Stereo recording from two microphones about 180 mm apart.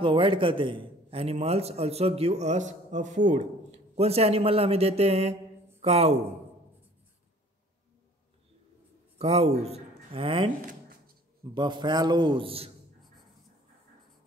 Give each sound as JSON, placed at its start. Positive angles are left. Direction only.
{"t": 0.0, "sound": "a man's voice", "side_deg": -30}
{"t": 9.2, "sound": "a man's voice", "side_deg": -35}
{"t": 10.6, "sound": "a sound", "side_deg": -50}
{"t": 11.5, "sound": "a man's voice", "side_deg": -25}